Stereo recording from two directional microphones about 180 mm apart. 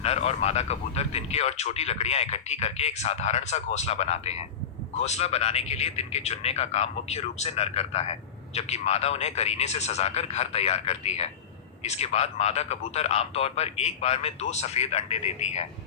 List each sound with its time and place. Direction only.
0.0 s speech: 35° left (ahead or behind)